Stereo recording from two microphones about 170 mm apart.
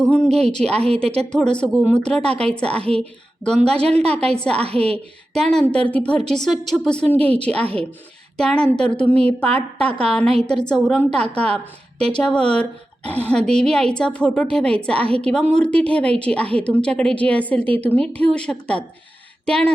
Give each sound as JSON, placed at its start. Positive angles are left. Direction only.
{"t": 0.1, "sound": "a woman's voice", "side_deg": 5}
{"t": 3.8, "sound": "a woman's voice", "side_deg": -35}
{"t": 4.3, "sound": "a woman's voice", "side_deg": 5}
{"t": 4.6, "sound": "a woman's voice", "side_deg": -35}
{"t": 5.3, "sound": "a woman's voice", "side_deg": 5}